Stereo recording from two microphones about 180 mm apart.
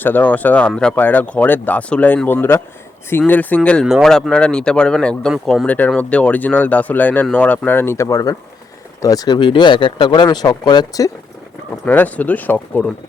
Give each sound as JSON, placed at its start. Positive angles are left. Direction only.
{"t": 0.0, "sound": "speech", "side_deg": 10}
{"t": 11.9, "sound": "speech", "side_deg": 10}